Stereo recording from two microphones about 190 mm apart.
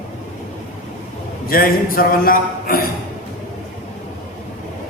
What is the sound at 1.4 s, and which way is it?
A man's voice, 50° left (ahead or behind).